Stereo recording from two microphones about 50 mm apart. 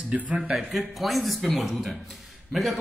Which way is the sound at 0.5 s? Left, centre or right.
Centre.